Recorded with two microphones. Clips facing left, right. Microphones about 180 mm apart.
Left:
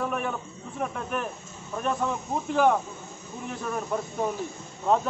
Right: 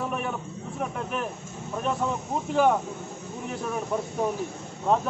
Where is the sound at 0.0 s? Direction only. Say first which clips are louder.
Left 1 dB; 5° right (ahead or behind).